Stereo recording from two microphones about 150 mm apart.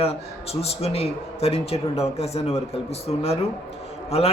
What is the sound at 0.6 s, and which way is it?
A man's voice, 45° left (ahead or behind).